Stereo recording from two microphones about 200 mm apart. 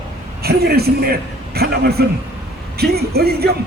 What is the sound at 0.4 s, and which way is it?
Speech, 50° right (ahead or behind).